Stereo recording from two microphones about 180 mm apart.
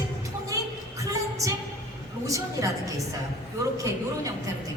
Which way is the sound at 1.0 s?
20° right (ahead or behind).